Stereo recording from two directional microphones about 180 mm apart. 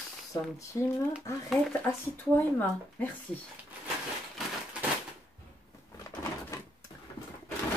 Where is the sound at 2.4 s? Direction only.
10° left (ahead or behind).